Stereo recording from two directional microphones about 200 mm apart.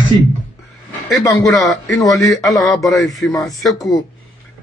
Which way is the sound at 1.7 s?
Centre (ahead or behind).